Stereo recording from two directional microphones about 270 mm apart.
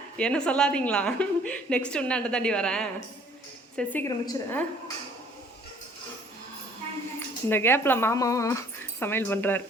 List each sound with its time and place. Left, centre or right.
0.2 s a woman's voice: centre
7.4 s speech: centre